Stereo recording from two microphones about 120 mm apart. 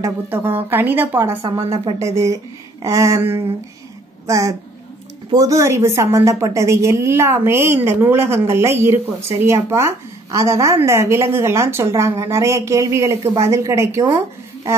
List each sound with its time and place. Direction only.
0.3 s a woman's voice: 15° right (ahead or behind)